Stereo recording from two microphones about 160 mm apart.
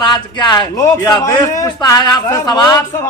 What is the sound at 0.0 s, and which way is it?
A man's voice, 25° left (ahead or behind).